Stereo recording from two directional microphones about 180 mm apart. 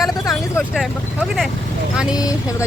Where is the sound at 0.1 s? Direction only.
20° left (ahead or behind).